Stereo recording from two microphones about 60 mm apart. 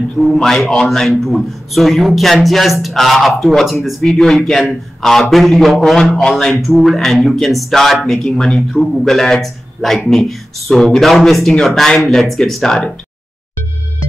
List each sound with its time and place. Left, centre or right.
0.2 s a man's voice: centre